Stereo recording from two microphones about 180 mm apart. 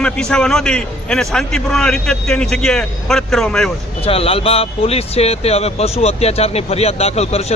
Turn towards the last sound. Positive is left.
turn(degrees=35)  # may be behind; listen again after turning